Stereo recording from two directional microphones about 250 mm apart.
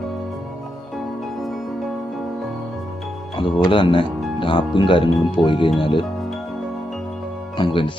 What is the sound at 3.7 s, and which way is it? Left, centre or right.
Speech, centre.